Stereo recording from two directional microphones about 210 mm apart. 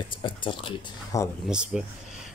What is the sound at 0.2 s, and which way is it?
Speech, 25° left (ahead or behind).